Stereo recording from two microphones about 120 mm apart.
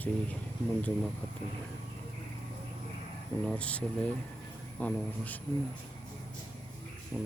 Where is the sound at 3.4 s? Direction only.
10° left (ahead or behind).